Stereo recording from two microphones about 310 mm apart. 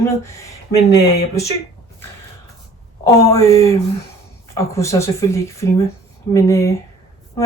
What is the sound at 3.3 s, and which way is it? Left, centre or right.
Speech, centre.